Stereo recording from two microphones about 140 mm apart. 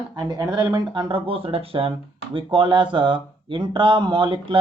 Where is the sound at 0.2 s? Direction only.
30° right (ahead or behind).